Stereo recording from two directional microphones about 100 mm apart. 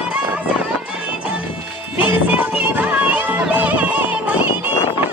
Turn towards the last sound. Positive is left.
turn(degrees=-15)  # may be behind; listen again after turning